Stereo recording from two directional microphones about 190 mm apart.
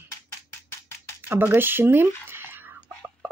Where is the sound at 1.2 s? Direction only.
10° right (ahead or behind).